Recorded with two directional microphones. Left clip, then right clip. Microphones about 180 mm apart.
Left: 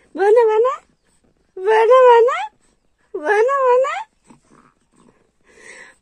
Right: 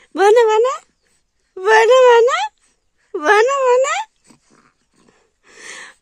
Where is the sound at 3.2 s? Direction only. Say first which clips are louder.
Right 2 dB; 35° right (ahead or behind).